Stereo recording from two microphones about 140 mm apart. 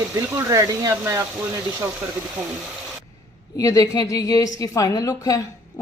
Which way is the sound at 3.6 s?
25° left (ahead or behind).